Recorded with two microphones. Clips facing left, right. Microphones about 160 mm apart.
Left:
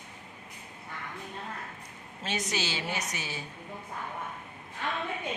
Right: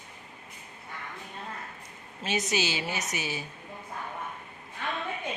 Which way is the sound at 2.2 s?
10° right (ahead or behind).